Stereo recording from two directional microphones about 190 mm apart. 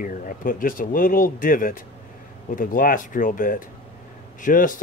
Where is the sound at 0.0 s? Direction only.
45° left (ahead or behind).